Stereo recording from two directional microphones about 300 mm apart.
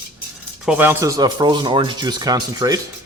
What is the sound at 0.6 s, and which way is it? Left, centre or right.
Speech, centre.